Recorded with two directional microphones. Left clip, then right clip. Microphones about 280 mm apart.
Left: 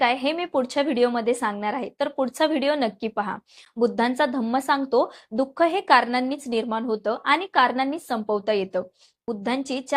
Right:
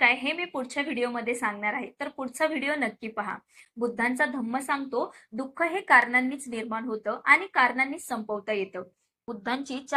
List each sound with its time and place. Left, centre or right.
0.0 s a woman's voice: left